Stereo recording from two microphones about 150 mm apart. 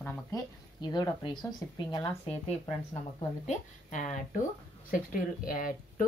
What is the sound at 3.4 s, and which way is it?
Speech, 55° left (ahead or behind).